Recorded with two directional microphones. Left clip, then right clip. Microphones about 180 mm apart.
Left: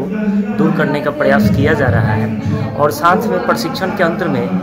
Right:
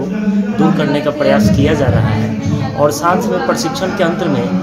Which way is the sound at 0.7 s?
5° left (ahead or behind).